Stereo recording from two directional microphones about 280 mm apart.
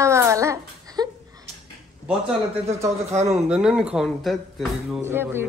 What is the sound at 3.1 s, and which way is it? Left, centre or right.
Speech, right.